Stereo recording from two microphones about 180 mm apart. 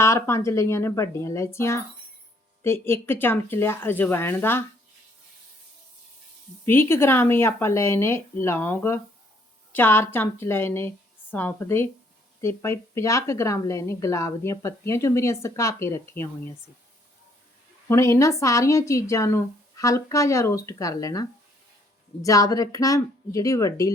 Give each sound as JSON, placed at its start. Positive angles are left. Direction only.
{"t": 0.0, "sound": "a woman's voice", "side_deg": 15}
{"t": 6.7, "sound": "a woman's voice", "side_deg": 15}
{"t": 17.8, "sound": "a woman's voice", "side_deg": 15}